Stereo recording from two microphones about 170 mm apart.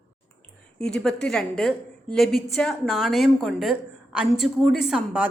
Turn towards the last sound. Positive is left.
turn(degrees=-5)  # may be behind; listen again after turning